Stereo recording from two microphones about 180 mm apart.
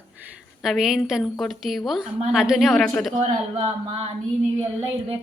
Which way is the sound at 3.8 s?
30° right (ahead or behind).